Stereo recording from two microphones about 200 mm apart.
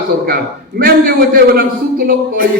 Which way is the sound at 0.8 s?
50° right (ahead or behind).